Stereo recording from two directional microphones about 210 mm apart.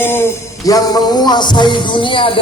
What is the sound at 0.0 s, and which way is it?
Speech, 10° left (ahead or behind).